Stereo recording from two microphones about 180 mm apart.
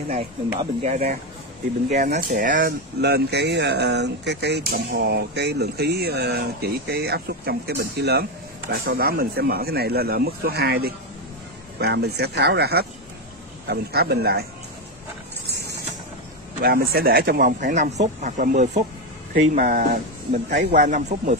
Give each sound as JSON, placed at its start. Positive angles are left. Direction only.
{"t": 0.1, "sound": "speech", "side_deg": -35}
{"t": 3.0, "sound": "speech", "side_deg": -65}
{"t": 15.4, "sound": "a sound", "side_deg": -65}
{"t": 16.6, "sound": "speech", "side_deg": -55}
{"t": 20.4, "sound": "speech", "side_deg": -70}
{"t": 20.8, "sound": "speech", "side_deg": -40}